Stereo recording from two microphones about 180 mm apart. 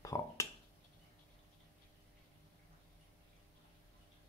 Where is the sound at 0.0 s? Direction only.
15° left (ahead or behind).